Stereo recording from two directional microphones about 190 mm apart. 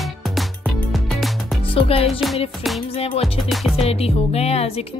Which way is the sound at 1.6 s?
30° left (ahead or behind).